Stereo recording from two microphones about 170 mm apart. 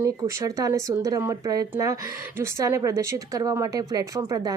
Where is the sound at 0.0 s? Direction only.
20° right (ahead or behind).